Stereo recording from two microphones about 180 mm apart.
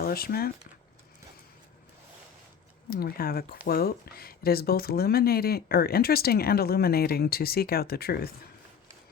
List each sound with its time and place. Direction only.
0.0 s speech: 55° left (ahead or behind)
2.9 s speech: 55° left (ahead or behind)